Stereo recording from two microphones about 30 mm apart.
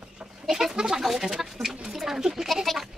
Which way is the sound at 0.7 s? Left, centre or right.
Right.